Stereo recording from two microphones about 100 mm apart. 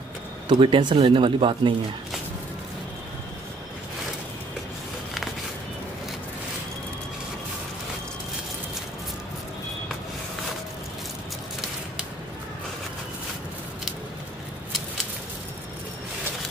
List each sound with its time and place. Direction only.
0.5 s speech: 55° right (ahead or behind)